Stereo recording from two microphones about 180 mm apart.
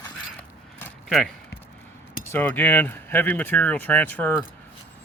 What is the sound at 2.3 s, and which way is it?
Speech, 10° left (ahead or behind).